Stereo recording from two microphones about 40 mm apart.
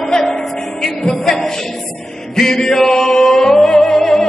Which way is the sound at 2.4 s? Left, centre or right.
Centre.